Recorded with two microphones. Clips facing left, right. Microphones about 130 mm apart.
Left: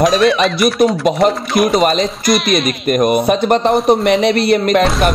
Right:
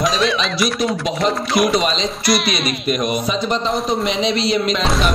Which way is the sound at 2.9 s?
50° left (ahead or behind).